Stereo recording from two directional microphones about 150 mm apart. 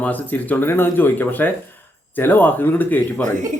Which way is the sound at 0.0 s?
10° left (ahead or behind).